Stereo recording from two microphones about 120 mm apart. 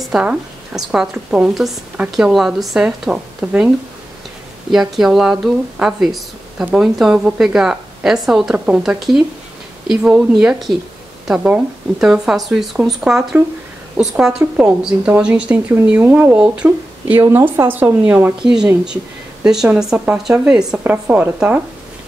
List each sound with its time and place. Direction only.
0.0 s a woman's voice: 5° right (ahead or behind)